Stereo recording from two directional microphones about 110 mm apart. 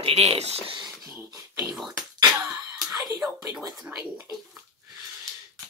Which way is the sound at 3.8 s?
10° right (ahead or behind).